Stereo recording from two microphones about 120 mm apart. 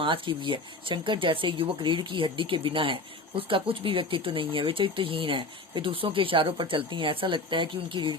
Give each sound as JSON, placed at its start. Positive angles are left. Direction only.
{"t": 0.0, "sound": "speech", "side_deg": -45}